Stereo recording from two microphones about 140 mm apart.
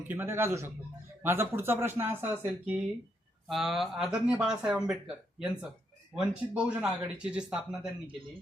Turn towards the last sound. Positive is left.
turn(degrees=-5)  # may be behind; listen again after turning